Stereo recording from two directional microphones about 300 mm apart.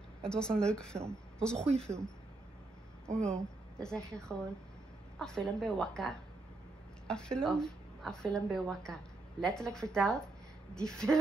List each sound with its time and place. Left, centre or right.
0.2 s speech: centre
3.2 s speech: centre